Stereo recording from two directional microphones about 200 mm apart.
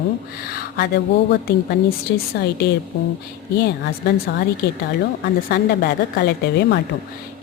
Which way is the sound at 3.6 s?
55° left (ahead or behind).